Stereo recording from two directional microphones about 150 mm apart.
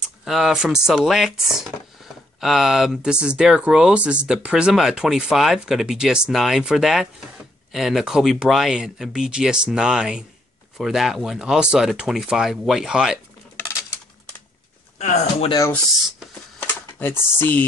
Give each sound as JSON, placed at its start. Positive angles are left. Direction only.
{"t": 0.2, "sound": "speech", "side_deg": -5}
{"t": 15.0, "sound": "speech", "side_deg": 50}
{"t": 16.5, "sound": "a sound", "side_deg": 15}